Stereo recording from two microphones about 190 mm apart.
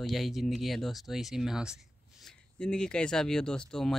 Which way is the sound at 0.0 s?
Centre (ahead or behind).